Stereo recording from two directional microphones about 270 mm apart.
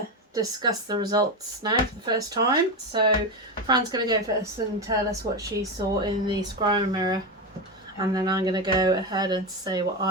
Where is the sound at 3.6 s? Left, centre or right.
Centre.